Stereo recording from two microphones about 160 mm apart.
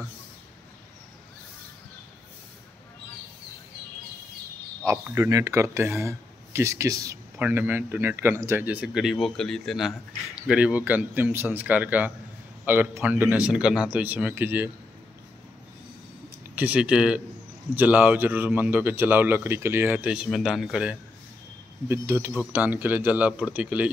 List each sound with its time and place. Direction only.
5.0 s a man's voice: 15° right (ahead or behind)
16.5 s a man's voice: 10° right (ahead or behind)
21.8 s a man's voice: 15° right (ahead or behind)